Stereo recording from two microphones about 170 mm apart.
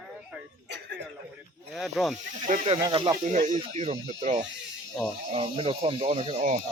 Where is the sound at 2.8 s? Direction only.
25° right (ahead or behind).